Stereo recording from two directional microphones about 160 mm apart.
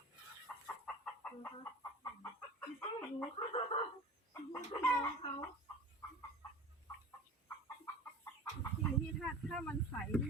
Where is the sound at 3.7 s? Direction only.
40° left (ahead or behind).